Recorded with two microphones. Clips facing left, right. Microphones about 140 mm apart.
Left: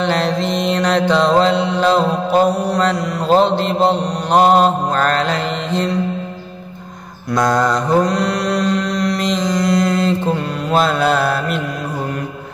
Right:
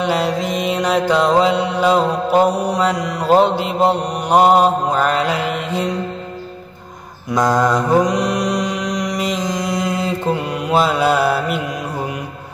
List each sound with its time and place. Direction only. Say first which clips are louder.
0.0 s mantra: left 1 dB; 10° right (ahead or behind)
7.3 s mantra: even; 10° right (ahead or behind)